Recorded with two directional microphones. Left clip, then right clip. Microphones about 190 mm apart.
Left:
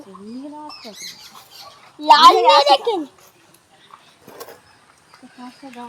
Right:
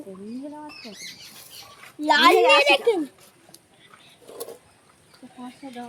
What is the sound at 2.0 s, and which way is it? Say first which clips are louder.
Speech: left 9 dB; 35° right (ahead or behind).